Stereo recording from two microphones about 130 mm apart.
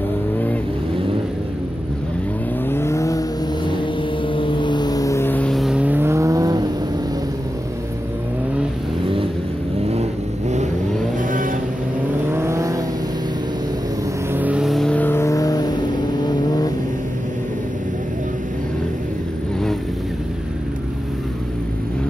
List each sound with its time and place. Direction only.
2.7 s vehicle: 20° left (ahead or behind)
5.5 s vehicle: centre (ahead or behind); by 6.7 s 30° right (ahead or behind)
9.0 s vehicle: 45° right (ahead or behind)
11.1 s vehicle: 90° right
12.3 s vehicle: 20° right (ahead or behind)
14.3 s vehicle: 10° right (ahead or behind)
14.7 s vehicle: 5° left (ahead or behind); by 16.7 s 30° left (ahead or behind)